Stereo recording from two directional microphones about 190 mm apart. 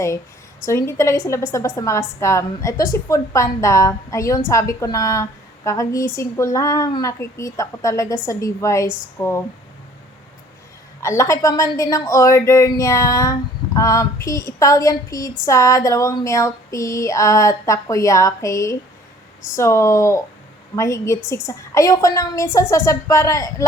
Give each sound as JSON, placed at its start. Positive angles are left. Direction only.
{"t": 0.6, "sound": "speech", "side_deg": 15}
{"t": 11.0, "sound": "speech", "side_deg": 15}